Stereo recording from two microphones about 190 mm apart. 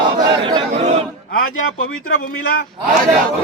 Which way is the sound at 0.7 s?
35° right (ahead or behind).